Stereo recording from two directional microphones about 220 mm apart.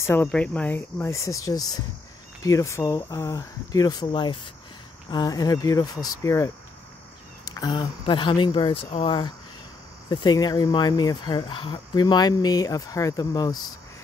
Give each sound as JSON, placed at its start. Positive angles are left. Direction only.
{"t": 0.0, "sound": "speech", "side_deg": 10}